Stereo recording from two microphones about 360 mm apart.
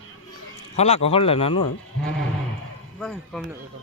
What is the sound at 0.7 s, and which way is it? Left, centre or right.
Speech, centre.